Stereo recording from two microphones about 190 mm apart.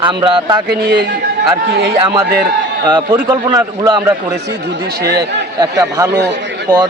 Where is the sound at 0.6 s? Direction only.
60° right (ahead or behind).